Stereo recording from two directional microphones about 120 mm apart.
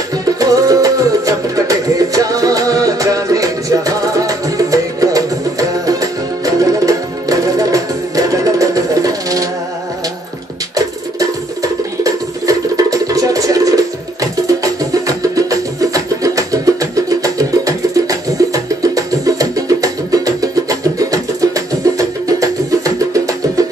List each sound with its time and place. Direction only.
0.2 s music: 30° right (ahead or behind)
11.1 s music: 30° right (ahead or behind)